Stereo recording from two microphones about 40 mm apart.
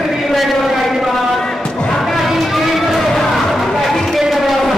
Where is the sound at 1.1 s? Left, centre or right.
Centre.